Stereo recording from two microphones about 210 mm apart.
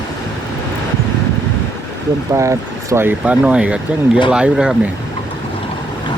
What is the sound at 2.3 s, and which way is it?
Speech, 15° right (ahead or behind).